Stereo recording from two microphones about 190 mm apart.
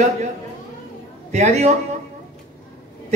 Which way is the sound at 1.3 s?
35° right (ahead or behind).